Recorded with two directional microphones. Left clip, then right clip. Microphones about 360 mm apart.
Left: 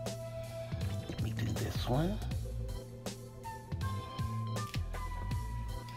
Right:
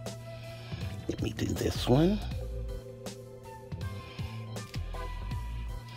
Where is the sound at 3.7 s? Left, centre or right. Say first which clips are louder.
Left 2 dB; centre.